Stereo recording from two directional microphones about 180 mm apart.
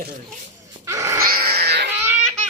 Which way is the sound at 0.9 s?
15° right (ahead or behind).